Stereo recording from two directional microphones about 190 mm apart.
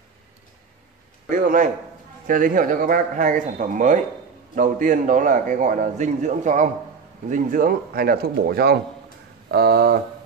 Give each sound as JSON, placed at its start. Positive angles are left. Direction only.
{"t": 1.3, "sound": "a man's voice", "side_deg": -45}